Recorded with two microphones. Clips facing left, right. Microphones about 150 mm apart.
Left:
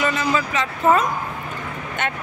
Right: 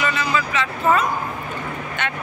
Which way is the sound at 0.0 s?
40° left (ahead or behind).